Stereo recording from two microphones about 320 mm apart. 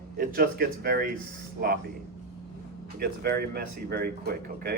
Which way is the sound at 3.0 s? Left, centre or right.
Right.